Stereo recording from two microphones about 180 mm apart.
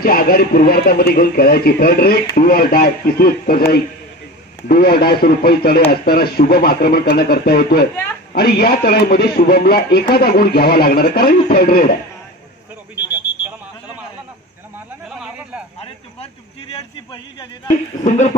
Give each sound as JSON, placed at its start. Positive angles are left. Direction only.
{"t": 0.0, "sound": "speech", "side_deg": 55}
{"t": 7.9, "sound": "a woman's voice", "side_deg": 10}
{"t": 8.3, "sound": "speech", "side_deg": 60}
{"t": 15.0, "sound": "a sound", "side_deg": -5}
{"t": 16.7, "sound": "a man's voice", "side_deg": 25}
{"t": 18.0, "sound": "speech", "side_deg": 40}